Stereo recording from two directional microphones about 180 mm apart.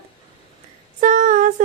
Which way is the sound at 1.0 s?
45° right (ahead or behind).